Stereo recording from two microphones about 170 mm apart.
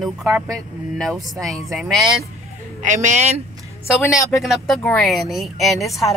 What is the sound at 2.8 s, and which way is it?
Speech, 45° right (ahead or behind).